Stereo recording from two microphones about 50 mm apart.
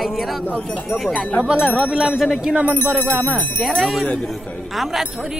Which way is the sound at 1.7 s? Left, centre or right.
Right.